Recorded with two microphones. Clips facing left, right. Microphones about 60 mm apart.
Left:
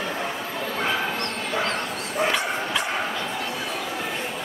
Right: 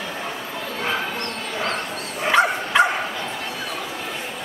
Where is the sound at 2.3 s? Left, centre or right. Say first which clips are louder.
Right 8 dB; right.